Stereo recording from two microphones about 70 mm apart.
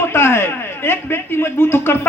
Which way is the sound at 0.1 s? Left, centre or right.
Left.